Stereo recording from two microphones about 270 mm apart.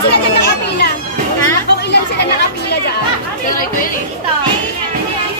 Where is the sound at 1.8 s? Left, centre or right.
Left.